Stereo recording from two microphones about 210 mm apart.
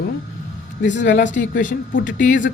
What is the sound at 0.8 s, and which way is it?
Speech, 35° left (ahead or behind).